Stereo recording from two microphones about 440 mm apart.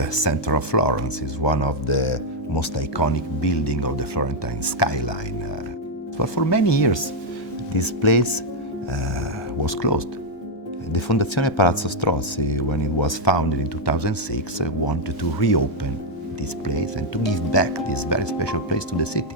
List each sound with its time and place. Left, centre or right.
0.0 s speech: left
2.6 s speech: left
6.1 s speech: left
7.7 s speech: left
9.6 s speech: left
10.9 s speech: left
16.6 s speech: left